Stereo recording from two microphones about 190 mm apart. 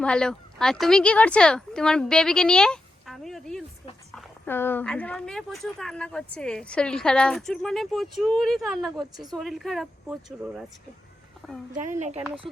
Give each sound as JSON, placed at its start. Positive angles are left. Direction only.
{"t": 0.0, "sound": "a woman's voice", "side_deg": 5}
{"t": 9.1, "sound": "a woman's voice", "side_deg": -20}
{"t": 9.4, "sound": "speech", "side_deg": 0}
{"t": 11.8, "sound": "speech", "side_deg": -40}